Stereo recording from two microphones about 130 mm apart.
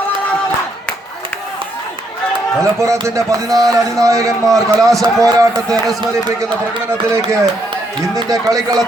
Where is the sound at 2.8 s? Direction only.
25° right (ahead or behind).